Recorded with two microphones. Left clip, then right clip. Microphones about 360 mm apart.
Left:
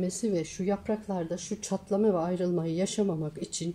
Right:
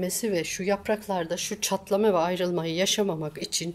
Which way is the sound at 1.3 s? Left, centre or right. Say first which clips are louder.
Right 6 dB; right.